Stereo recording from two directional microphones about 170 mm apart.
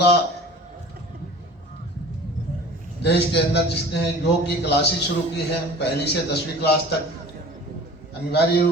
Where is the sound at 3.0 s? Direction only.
80° left.